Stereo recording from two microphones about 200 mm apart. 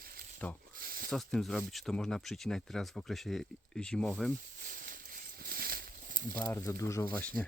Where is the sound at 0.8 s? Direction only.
50° right (ahead or behind).